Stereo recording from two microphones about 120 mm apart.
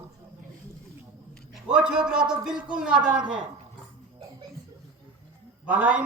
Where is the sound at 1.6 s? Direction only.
5° right (ahead or behind).